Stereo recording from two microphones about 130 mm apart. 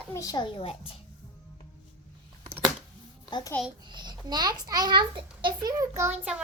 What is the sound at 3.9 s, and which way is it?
A child's voice, 35° right (ahead or behind).